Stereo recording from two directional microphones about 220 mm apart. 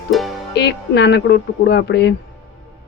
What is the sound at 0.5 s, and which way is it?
Speech, 50° left (ahead or behind).